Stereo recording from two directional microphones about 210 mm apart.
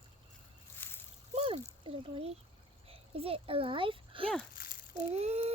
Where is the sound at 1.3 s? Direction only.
30° right (ahead or behind).